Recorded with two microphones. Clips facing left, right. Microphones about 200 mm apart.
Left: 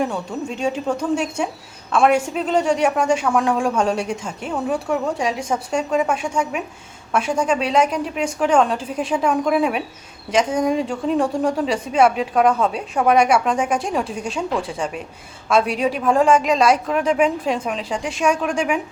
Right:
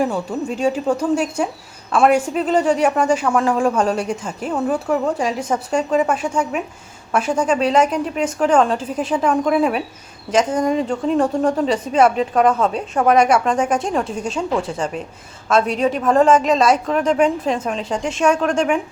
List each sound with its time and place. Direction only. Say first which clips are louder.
0.0 s speech: right 3 dB; 5° right (ahead or behind)
6.3 s speech: right 2 dB; 10° left (ahead or behind)
7.1 s a woman's voice: right 2 dB; centre (ahead or behind)